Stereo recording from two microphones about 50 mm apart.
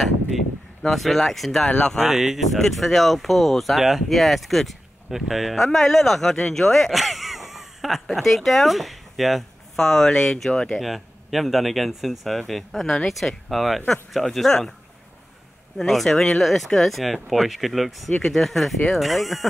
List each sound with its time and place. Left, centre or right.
0.8 s speech: centre
2.3 s speech: centre
10.8 s speech: centre
15.8 s speech: centre